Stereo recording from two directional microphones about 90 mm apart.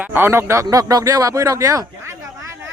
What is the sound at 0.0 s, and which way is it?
Speech, 25° right (ahead or behind).